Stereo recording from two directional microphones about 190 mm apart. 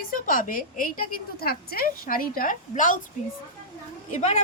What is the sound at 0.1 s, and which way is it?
A woman's voice, 45° left (ahead or behind).